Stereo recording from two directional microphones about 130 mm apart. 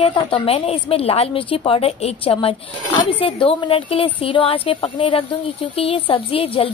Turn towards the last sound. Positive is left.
turn(degrees=45)  # may be behind; listen again after turning